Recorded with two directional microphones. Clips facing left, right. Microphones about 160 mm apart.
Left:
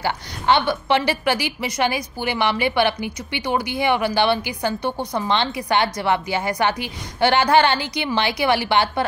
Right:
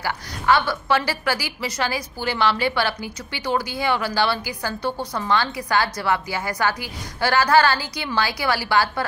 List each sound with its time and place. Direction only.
0.0 s a woman's voice: 25° left (ahead or behind)